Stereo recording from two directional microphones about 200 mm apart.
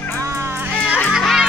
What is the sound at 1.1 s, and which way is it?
Music, centre (ahead or behind).